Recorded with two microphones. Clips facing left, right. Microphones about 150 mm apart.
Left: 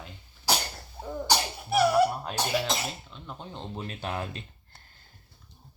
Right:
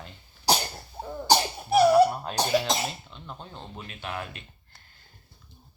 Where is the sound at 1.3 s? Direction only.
35° right (ahead or behind).